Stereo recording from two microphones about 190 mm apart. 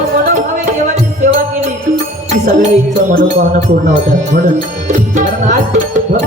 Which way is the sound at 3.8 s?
40° right (ahead or behind).